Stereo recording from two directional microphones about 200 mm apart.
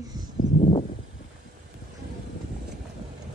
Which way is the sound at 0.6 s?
30° left (ahead or behind).